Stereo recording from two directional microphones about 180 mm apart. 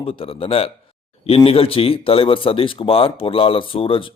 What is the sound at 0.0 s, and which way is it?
Speech, 30° left (ahead or behind).